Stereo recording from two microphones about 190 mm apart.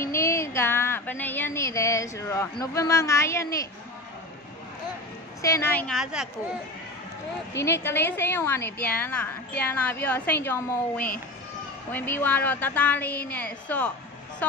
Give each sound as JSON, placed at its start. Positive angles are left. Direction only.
{"t": 0.0, "sound": "a woman's voice", "side_deg": 15}
{"t": 5.4, "sound": "a woman's voice", "side_deg": 15}
{"t": 6.2, "sound": "speech", "side_deg": -5}
{"t": 7.5, "sound": "a woman's voice", "side_deg": 15}